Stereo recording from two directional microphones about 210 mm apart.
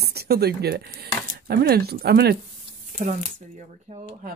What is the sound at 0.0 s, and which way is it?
Speech, 50° right (ahead or behind).